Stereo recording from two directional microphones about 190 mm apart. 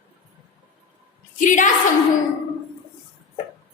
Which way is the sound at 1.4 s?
40° left (ahead or behind).